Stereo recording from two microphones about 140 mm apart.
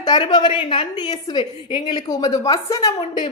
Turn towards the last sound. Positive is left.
turn(degrees=25)  # may be behind; listen again after turning